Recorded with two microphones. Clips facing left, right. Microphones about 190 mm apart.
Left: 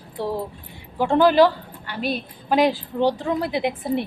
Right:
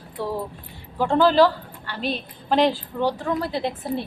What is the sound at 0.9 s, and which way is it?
A woman's voice, 15° left (ahead or behind).